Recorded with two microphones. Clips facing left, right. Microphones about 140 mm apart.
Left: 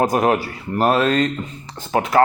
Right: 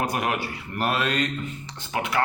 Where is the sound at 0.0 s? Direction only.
40° left (ahead or behind).